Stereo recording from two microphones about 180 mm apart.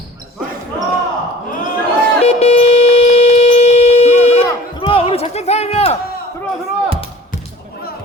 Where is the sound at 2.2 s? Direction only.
35° left (ahead or behind).